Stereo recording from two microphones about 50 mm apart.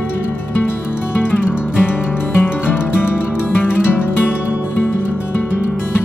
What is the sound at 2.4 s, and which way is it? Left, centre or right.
Music, left.